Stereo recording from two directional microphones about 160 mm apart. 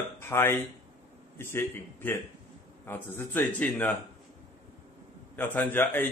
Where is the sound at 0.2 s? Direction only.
15° left (ahead or behind).